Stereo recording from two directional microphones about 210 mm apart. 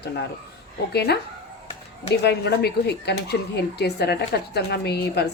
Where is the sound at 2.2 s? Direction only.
50° left (ahead or behind).